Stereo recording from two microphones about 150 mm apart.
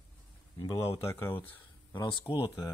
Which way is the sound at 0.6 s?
25° left (ahead or behind).